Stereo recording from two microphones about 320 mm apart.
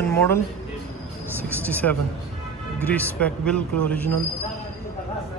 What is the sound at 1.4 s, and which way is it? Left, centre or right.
A man's voice, centre.